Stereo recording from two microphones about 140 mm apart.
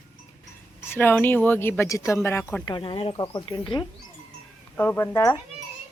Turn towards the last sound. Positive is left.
turn(degrees=20)  # may be behind; listen again after turning